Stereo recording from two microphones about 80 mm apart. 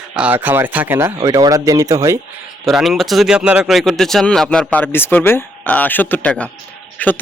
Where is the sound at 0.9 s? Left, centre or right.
Right.